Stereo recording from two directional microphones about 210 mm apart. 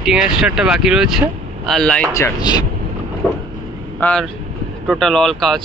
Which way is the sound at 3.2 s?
Centre (ahead or behind).